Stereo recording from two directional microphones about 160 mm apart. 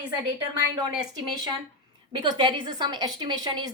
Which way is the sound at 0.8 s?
30° right (ahead or behind).